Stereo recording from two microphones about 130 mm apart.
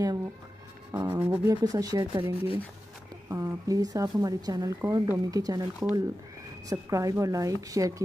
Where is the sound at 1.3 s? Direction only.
30° right (ahead or behind).